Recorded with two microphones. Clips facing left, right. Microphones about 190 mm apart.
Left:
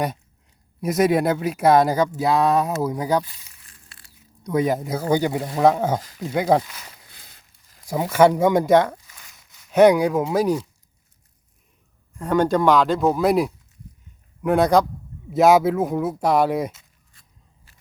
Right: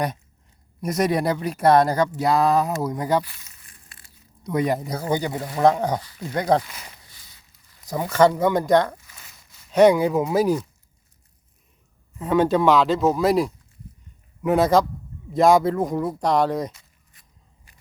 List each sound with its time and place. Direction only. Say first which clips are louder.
0.8 s speech: left 3 dB; centre (ahead or behind)
3.7 s a sound: even; 15° right (ahead or behind)
4.4 s speech: left 2 dB; centre (ahead or behind)
7.9 s speech: left 2 dB; 10° left (ahead or behind)
9.1 s a sound: right 1 dB; centre (ahead or behind)
12.1 s speech: even; 5° right (ahead or behind)